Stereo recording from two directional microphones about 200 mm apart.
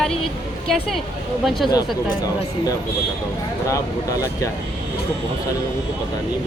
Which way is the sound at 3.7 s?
15° left (ahead or behind).